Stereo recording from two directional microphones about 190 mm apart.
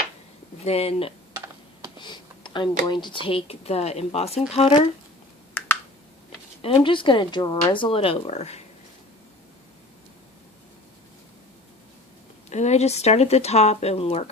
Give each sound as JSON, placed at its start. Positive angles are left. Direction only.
{"t": 0.6, "sound": "speech", "side_deg": 35}
{"t": 2.0, "sound": "a sound", "side_deg": 25}
{"t": 2.8, "sound": "speech", "side_deg": 25}
{"t": 5.6, "sound": "a sound", "side_deg": 10}
{"t": 6.6, "sound": "speech", "side_deg": 30}
{"t": 12.5, "sound": "speech", "side_deg": 35}